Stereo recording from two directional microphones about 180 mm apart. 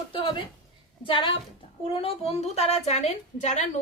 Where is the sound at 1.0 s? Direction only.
30° left (ahead or behind).